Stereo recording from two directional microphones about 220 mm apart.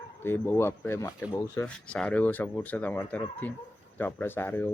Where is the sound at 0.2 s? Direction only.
10° left (ahead or behind).